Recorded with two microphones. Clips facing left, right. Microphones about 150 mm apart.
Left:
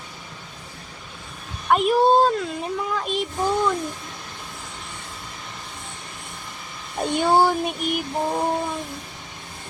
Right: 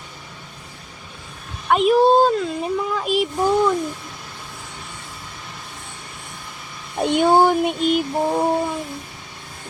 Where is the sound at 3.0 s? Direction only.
10° right (ahead or behind).